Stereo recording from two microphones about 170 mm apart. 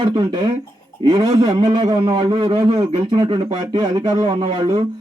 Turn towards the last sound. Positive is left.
turn(degrees=-30)  # may be behind; listen again after turning